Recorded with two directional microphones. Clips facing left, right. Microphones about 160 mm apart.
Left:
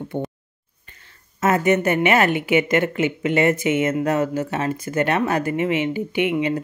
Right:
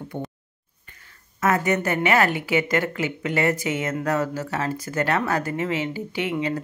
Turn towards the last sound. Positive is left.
turn(degrees=20)  # may be behind; listen again after turning